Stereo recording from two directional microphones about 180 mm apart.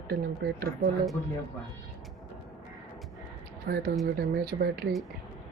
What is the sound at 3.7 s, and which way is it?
Speech, 60° right (ahead or behind).